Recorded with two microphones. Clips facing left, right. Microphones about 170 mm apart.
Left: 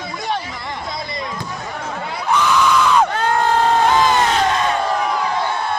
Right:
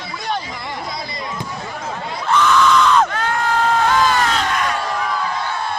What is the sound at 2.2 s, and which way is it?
Screaming, 10° left (ahead or behind).